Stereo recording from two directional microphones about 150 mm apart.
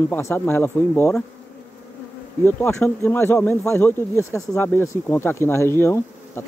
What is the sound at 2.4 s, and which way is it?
Speech, 10° left (ahead or behind).